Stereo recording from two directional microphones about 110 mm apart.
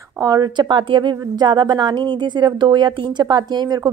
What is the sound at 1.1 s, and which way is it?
A woman's voice, 35° right (ahead or behind).